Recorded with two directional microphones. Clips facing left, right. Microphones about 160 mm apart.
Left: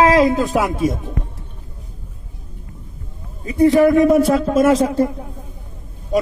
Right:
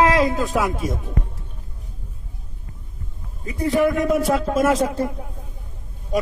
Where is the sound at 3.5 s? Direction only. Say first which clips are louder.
Left 7 dB; 20° left (ahead or behind).